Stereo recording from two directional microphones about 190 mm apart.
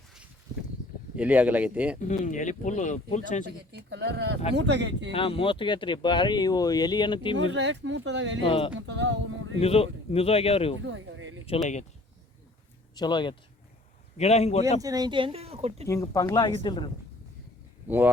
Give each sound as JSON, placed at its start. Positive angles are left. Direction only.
{"t": 1.1, "sound": "speech", "side_deg": -10}
{"t": 2.0, "sound": "speech", "side_deg": 40}
{"t": 3.7, "sound": "speech", "side_deg": -65}
{"t": 5.1, "sound": "speech", "side_deg": 30}
{"t": 7.5, "sound": "speech", "side_deg": -70}
{"t": 8.4, "sound": "speech", "side_deg": 30}
{"t": 8.7, "sound": "speech", "side_deg": -70}
{"t": 9.6, "sound": "speech", "side_deg": 30}
{"t": 10.8, "sound": "a sound", "side_deg": -80}
{"t": 13.0, "sound": "speech", "side_deg": 25}
{"t": 14.2, "sound": "speech", "side_deg": 35}
{"t": 14.8, "sound": "speech", "side_deg": -20}
{"t": 15.9, "sound": "speech", "side_deg": 15}
{"t": 17.8, "sound": "speech", "side_deg": -10}